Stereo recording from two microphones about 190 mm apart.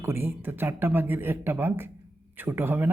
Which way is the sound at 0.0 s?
10° right (ahead or behind).